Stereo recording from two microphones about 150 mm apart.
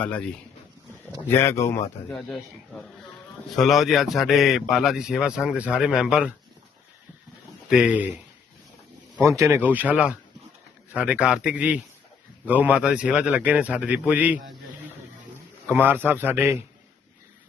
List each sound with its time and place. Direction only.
0.0 s speech: 10° left (ahead or behind)
1.3 s speech: 15° left (ahead or behind)
2.0 s a man's voice: centre (ahead or behind)
7.7 s a man's voice: 5° right (ahead or behind)
9.2 s a man's voice: 20° right (ahead or behind)
15.7 s a man's voice: 15° right (ahead or behind)